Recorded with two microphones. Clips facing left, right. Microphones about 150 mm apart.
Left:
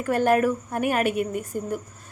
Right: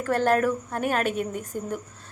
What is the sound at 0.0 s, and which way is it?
A woman's voice, 10° left (ahead or behind).